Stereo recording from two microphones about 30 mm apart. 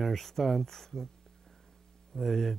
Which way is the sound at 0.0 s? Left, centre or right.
Centre.